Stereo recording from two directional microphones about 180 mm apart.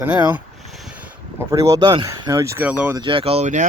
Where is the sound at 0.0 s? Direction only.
10° right (ahead or behind).